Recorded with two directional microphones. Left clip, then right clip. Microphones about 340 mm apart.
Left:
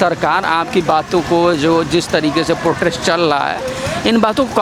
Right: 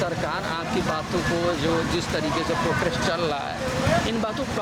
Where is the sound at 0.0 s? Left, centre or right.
Left.